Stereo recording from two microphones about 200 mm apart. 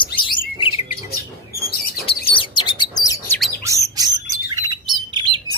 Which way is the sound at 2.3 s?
25° left (ahead or behind).